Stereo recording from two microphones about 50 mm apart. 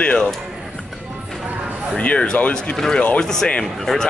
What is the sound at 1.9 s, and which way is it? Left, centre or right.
Speech, left.